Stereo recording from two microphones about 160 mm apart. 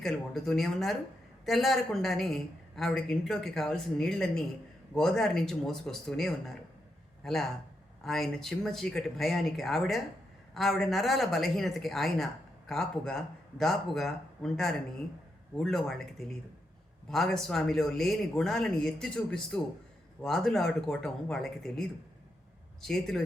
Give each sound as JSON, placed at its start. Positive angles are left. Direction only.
{"t": 0.0, "sound": "speech", "side_deg": 5}